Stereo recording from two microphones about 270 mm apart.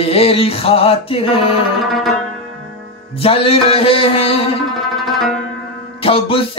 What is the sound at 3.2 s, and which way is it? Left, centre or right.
Music, left.